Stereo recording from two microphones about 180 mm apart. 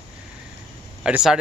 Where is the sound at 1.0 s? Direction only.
5° right (ahead or behind).